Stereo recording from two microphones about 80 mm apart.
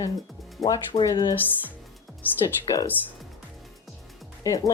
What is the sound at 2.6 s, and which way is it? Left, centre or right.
Speech, left.